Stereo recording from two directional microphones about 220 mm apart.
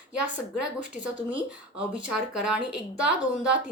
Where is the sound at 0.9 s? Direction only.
5° right (ahead or behind).